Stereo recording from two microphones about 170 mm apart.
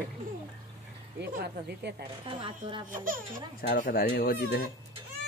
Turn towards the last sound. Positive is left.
turn(degrees=65)  # may be behind; listen again after turning